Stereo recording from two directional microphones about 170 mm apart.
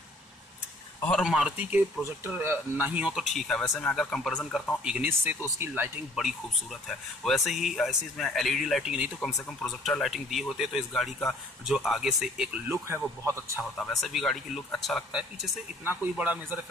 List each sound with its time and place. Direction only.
1.0 s speech: centre (ahead or behind)
12.7 s speech: 15° right (ahead or behind)
13.7 s speech: centre (ahead or behind)
15.8 s speech: 10° right (ahead or behind)